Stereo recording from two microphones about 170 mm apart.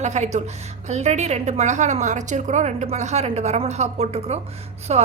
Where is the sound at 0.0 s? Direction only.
40° right (ahead or behind).